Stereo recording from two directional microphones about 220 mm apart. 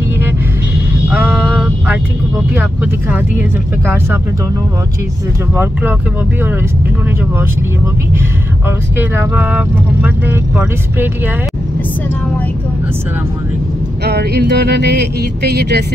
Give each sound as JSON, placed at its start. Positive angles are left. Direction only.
{"t": 1.0, "sound": "a sound", "side_deg": -10}
{"t": 2.5, "sound": "speech", "side_deg": -10}
{"t": 5.5, "sound": "speech", "side_deg": -10}
{"t": 8.6, "sound": "speech", "side_deg": -10}
{"t": 14.0, "sound": "speech", "side_deg": -50}